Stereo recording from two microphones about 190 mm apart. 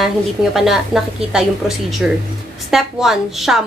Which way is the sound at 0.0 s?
Centre (ahead or behind).